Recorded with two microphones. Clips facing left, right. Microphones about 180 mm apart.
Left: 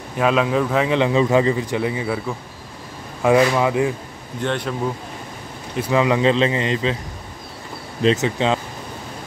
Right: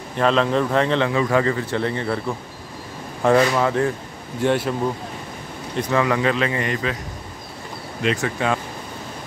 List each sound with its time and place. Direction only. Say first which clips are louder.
0.2 s a man's voice: even; 5° left (ahead or behind)
4.4 s speech: right 4 dB; 5° right (ahead or behind)
5.8 s speech: left 2 dB; 15° left (ahead or behind)
8.0 s speech: left 4 dB; 25° left (ahead or behind)